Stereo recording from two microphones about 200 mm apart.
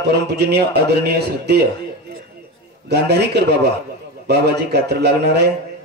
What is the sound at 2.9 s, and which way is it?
Speech, 55° right (ahead or behind).